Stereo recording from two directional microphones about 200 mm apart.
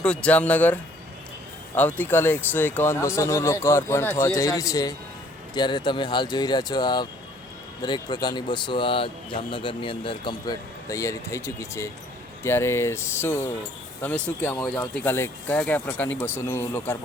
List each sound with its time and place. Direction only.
0.0 s speech: 5° left (ahead or behind)